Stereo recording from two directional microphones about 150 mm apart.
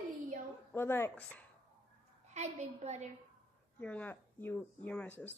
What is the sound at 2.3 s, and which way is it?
Speech, 50° right (ahead or behind).